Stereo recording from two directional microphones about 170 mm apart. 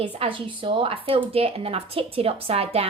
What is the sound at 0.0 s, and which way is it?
A woman's voice, 30° right (ahead or behind).